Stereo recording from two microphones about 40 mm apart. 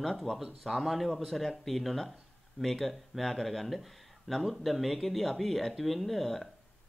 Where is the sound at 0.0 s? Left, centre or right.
Centre.